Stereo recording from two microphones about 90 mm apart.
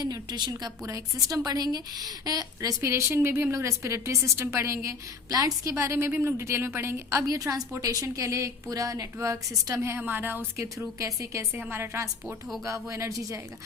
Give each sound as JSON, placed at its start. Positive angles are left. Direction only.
{"t": 0.0, "sound": "a woman's voice", "side_deg": -50}
{"t": 0.8, "sound": "a woman's voice", "side_deg": -40}
{"t": 2.8, "sound": "a woman's voice", "side_deg": -30}
{"t": 10.0, "sound": "a woman's voice", "side_deg": -20}
{"t": 10.6, "sound": "a woman's voice", "side_deg": -35}
{"t": 12.9, "sound": "a woman's voice", "side_deg": -35}